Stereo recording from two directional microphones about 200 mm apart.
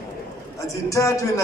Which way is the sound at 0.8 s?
15° left (ahead or behind).